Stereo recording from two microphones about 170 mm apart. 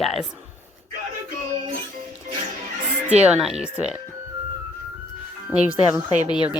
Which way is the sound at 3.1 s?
5° right (ahead or behind).